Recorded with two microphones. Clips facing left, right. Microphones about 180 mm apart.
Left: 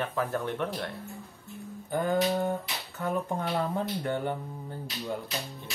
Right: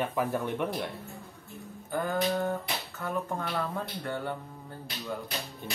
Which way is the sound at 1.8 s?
20° left (ahead or behind).